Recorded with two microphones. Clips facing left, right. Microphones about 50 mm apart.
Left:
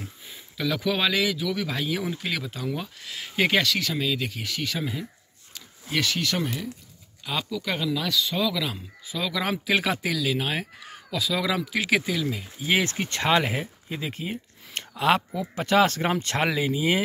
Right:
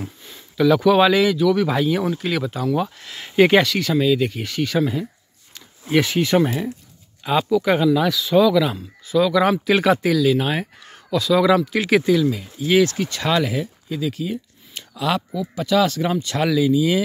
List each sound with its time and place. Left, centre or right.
0.6 s speech: centre
5.9 s speech: right
8.1 s speech: centre
12.3 s speech: centre; by 17.0 s left